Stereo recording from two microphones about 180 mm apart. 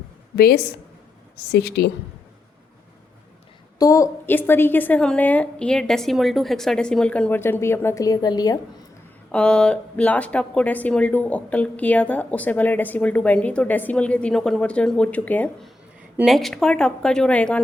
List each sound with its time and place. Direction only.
0.3 s a woman's voice: 60° left (ahead or behind)
3.8 s speech: 20° left (ahead or behind)
9.3 s speech: 5° left (ahead or behind)